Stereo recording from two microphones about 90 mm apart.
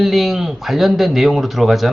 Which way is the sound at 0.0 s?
5° right (ahead or behind).